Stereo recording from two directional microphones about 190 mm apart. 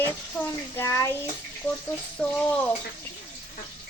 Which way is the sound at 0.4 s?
Centre (ahead or behind).